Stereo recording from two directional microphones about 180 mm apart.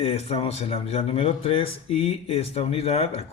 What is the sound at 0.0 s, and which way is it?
Speech, 35° left (ahead or behind).